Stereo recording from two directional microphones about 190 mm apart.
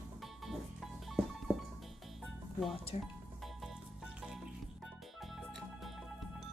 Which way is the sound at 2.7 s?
30° left (ahead or behind).